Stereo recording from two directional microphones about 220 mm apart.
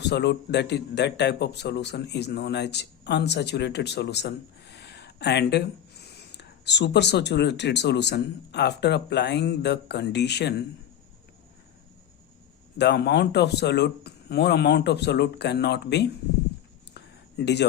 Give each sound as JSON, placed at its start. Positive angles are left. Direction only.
{"t": 0.0, "sound": "a man's voice", "side_deg": 50}
{"t": 12.7, "sound": "a man's voice", "side_deg": 50}
{"t": 16.9, "sound": "a sound", "side_deg": 50}